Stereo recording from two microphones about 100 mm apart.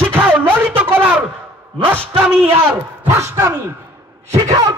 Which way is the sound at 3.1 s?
30° right (ahead or behind).